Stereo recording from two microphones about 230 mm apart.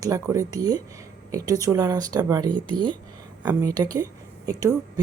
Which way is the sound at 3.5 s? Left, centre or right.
Centre.